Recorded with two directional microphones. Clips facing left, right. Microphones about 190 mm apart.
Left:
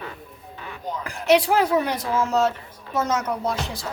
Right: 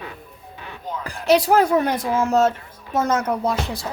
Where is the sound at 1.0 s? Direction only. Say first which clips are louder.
Right 1 dB; 35° right (ahead or behind).